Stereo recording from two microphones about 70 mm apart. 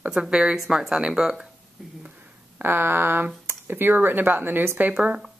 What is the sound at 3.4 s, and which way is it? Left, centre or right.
A woman's voice, right.